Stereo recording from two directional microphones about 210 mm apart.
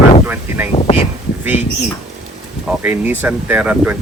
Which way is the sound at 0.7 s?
30° left (ahead or behind).